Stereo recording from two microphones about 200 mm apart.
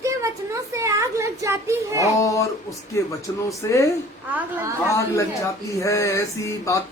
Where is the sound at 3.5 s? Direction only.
15° left (ahead or behind).